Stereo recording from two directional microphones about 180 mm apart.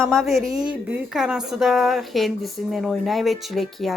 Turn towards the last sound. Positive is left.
turn(degrees=0)  # may be behind; listen again after turning